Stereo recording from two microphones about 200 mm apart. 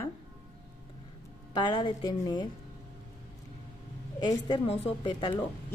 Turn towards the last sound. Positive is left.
turn(degrees=25)  # may be behind; listen again after turning